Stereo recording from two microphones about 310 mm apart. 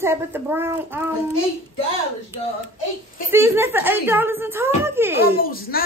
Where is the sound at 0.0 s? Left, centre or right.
Centre.